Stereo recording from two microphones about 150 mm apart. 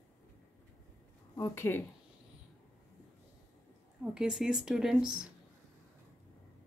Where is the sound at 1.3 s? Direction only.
20° left (ahead or behind).